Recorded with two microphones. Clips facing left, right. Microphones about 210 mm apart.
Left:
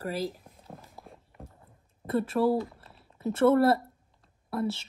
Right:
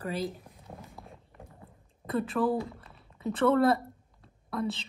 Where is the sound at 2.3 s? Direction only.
20° left (ahead or behind).